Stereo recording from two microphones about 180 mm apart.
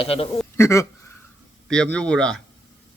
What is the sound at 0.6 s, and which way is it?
Speech, 15° left (ahead or behind).